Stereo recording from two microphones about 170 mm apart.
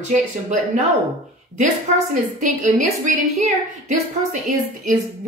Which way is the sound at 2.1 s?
45° right (ahead or behind).